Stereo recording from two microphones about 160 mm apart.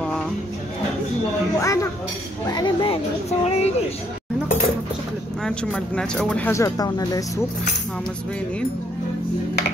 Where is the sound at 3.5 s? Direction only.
45° left (ahead or behind).